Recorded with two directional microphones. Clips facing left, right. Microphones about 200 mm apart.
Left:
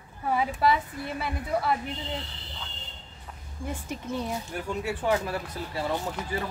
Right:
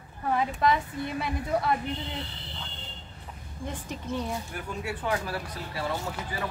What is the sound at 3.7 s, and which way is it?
Speech, 10° left (ahead or behind).